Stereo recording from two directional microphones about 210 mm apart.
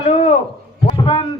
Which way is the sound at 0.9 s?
25° left (ahead or behind).